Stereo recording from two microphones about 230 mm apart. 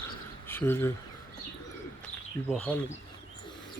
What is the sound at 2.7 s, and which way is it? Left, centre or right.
Speech, centre.